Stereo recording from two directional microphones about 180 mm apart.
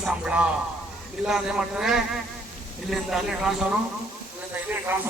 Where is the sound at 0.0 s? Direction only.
5° right (ahead or behind).